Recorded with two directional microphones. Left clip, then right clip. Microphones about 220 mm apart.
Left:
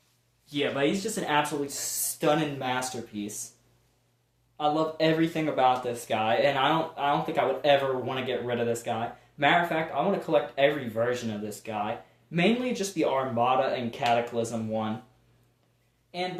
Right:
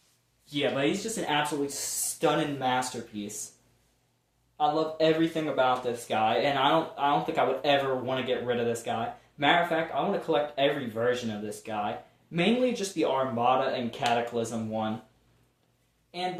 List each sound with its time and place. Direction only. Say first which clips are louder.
0.5 s speech: left 1 dB; 10° left (ahead or behind)
1.1 s speech: left 2 dB; 30° left (ahead or behind)
4.5 s speech: even; 35° left (ahead or behind)